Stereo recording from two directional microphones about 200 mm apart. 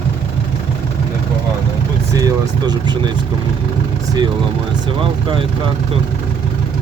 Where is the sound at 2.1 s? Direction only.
15° right (ahead or behind).